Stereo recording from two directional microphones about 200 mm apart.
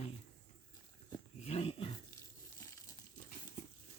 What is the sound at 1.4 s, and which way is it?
Dog, 30° left (ahead or behind).